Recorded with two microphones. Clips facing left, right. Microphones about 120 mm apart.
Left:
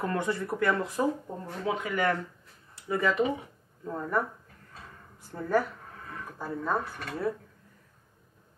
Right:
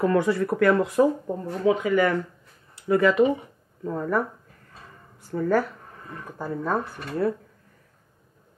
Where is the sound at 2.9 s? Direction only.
75° right (ahead or behind).